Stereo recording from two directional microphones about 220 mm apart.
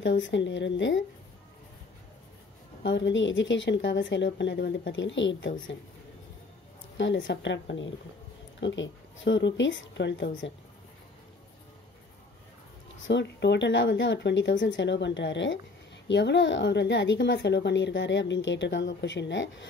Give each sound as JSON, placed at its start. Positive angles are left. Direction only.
{"t": 0.0, "sound": "speech", "side_deg": 55}
{"t": 2.8, "sound": "speech", "side_deg": 55}
{"t": 7.0, "sound": "speech", "side_deg": 55}
{"t": 13.0, "sound": "a woman's voice", "side_deg": 55}